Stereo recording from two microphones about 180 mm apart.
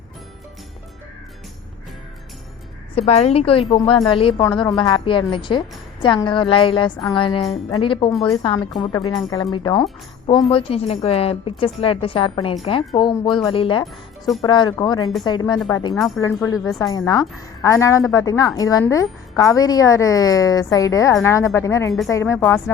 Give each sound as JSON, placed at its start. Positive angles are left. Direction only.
{"t": 2.9, "sound": "a woman's voice", "side_deg": 35}
{"t": 13.8, "sound": "speech", "side_deg": 0}
{"t": 14.4, "sound": "a woman's voice", "side_deg": 25}
{"t": 16.0, "sound": "speech", "side_deg": 0}
{"t": 16.2, "sound": "a woman's voice", "side_deg": 15}